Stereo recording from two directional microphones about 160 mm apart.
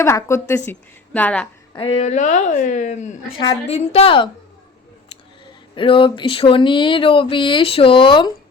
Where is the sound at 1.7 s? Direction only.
40° left (ahead or behind).